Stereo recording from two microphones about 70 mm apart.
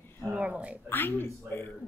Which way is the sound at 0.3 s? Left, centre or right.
Centre.